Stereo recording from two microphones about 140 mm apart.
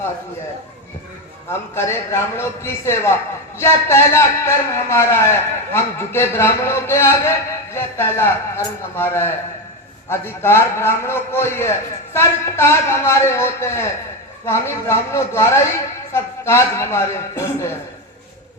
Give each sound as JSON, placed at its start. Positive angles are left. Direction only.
{"t": 1.5, "sound": "a man's voice", "side_deg": 15}